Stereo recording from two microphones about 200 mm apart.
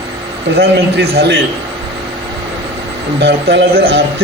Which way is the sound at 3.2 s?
55° right (ahead or behind).